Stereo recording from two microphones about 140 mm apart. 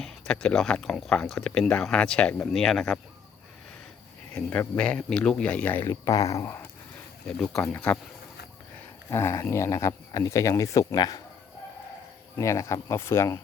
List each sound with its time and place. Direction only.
0.0 s speech: 5° left (ahead or behind)
4.4 s speech: 10° left (ahead or behind)
7.3 s speech: 5° left (ahead or behind)
9.0 s speech: 20° left (ahead or behind)
12.4 s speech: 20° left (ahead or behind)